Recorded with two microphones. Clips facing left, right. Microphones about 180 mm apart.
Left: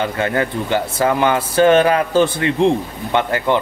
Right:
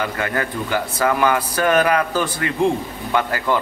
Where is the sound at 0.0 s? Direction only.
25° left (ahead or behind).